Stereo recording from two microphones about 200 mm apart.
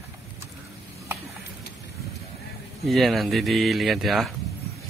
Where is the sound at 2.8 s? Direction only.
Centre (ahead or behind).